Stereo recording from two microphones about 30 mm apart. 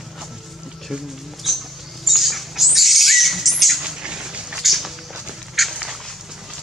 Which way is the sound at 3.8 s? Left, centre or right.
Right.